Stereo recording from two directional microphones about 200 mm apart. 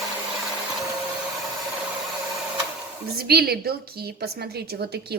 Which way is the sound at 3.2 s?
50° right (ahead or behind).